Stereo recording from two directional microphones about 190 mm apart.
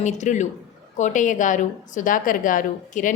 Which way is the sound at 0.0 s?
40° left (ahead or behind).